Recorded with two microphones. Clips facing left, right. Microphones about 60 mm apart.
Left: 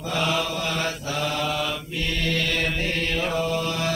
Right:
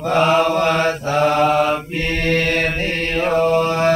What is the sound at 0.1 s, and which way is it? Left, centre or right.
Mantra, right.